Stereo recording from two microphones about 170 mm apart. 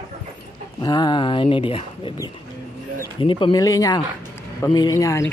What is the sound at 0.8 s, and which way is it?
Speech, 25° left (ahead or behind).